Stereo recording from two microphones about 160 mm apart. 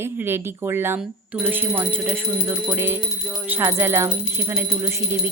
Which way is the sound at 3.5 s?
10° right (ahead or behind).